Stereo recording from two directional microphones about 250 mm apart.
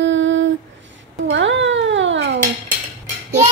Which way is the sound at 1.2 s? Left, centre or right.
Right.